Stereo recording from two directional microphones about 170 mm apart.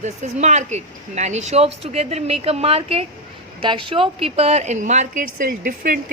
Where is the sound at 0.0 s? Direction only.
45° right (ahead or behind).